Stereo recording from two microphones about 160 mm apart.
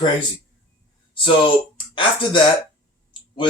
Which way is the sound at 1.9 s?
30° left (ahead or behind).